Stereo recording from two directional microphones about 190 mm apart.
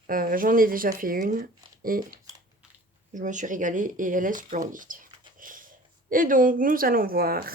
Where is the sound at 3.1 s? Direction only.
40° right (ahead or behind).